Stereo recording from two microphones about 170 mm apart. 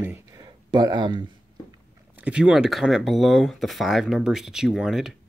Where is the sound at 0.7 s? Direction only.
25° right (ahead or behind).